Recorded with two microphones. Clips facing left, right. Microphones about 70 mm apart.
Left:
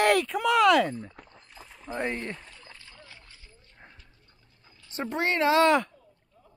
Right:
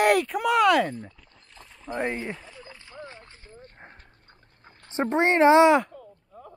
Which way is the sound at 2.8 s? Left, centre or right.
Right.